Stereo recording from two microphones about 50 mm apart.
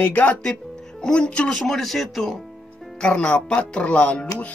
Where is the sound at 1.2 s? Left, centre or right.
Centre.